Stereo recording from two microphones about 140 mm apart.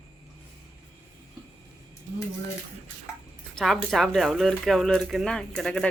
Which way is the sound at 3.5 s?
5° left (ahead or behind).